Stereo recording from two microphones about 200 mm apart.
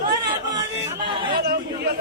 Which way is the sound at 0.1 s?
20° right (ahead or behind).